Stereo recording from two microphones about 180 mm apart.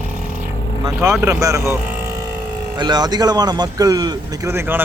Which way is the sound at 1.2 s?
15° right (ahead or behind).